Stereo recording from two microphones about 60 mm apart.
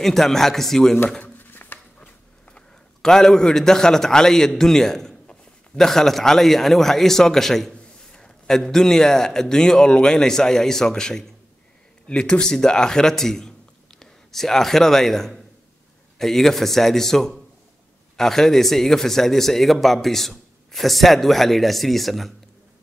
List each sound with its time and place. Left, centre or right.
0.0 s a man's voice: centre
1.2 s a sound: left
2.5 s a man's voice: centre